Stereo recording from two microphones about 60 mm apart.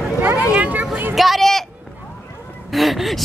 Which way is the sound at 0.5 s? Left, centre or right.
Right.